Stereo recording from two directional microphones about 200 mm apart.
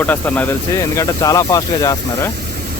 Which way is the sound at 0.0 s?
10° left (ahead or behind).